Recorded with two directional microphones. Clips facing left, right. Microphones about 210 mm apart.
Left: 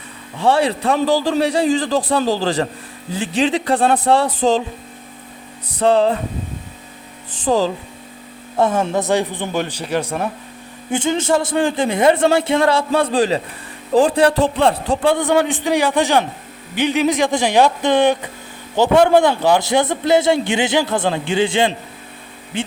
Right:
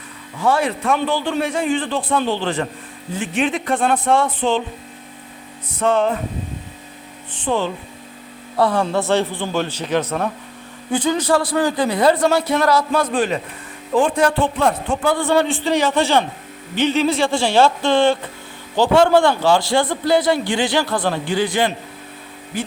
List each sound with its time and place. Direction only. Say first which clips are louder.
0.3 s a man's voice: left 3 dB; 30° left (ahead or behind)
5.8 s a man's voice: left 3 dB; 35° left (ahead or behind)
7.4 s speech: left 4 dB; 40° left (ahead or behind)
8.5 s speech: left 1 dB; 20° left (ahead or behind)
10.9 s a man's voice: even; 25° left (ahead or behind)
15.2 s speech: left 1 dB; 15° left (ahead or behind)